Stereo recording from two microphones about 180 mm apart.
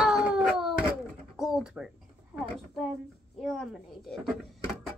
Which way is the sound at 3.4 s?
Centre (ahead or behind).